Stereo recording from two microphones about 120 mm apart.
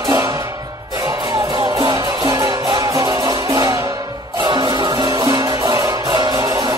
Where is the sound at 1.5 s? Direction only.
40° right (ahead or behind).